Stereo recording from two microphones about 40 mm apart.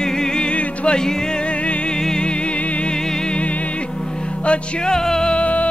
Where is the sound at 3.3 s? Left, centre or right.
Left.